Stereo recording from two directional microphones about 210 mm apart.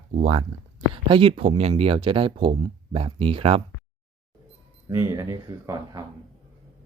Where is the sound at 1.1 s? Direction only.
25° right (ahead or behind).